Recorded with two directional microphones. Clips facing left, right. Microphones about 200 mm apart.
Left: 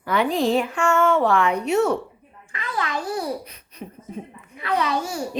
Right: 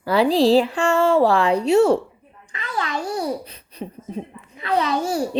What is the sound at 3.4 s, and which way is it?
A child's voice, 30° right (ahead or behind).